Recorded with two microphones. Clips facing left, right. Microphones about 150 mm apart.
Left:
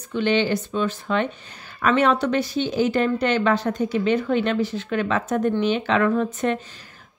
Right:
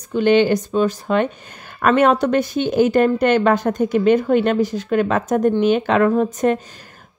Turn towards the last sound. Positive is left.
turn(degrees=-40)  # may be behind; listen again after turning